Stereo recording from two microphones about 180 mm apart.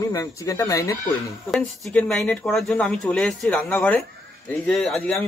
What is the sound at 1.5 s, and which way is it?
Speech, centre (ahead or behind).